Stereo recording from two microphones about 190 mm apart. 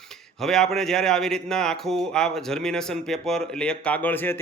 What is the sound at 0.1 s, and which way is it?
Speech, centre (ahead or behind).